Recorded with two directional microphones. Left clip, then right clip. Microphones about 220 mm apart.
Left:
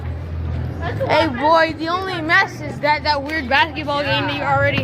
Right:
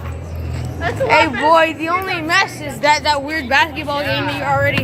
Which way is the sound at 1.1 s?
5° right (ahead or behind).